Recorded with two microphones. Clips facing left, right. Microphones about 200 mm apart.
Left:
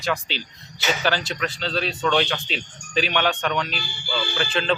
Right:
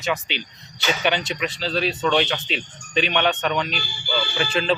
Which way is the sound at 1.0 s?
20° right (ahead or behind).